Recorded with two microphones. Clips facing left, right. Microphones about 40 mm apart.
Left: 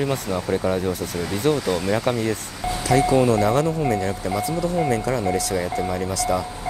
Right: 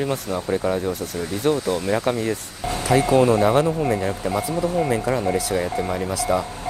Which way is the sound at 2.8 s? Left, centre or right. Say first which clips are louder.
Right 1 dB; right.